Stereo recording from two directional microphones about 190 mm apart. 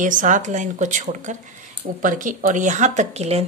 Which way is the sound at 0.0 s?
45° right (ahead or behind).